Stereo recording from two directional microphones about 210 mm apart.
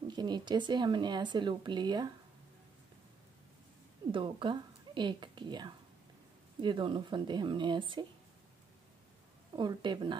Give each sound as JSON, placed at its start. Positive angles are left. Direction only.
{"t": 0.1, "sound": "speech", "side_deg": -20}
{"t": 4.1, "sound": "speech", "side_deg": -25}
{"t": 9.6, "sound": "speech", "side_deg": -20}